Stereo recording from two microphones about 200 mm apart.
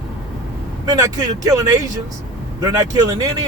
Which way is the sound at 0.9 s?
20° right (ahead or behind).